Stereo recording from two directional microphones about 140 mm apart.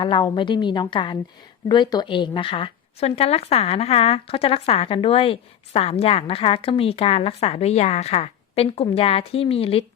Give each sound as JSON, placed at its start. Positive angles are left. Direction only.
{"t": 0.0, "sound": "a woman's voice", "side_deg": 35}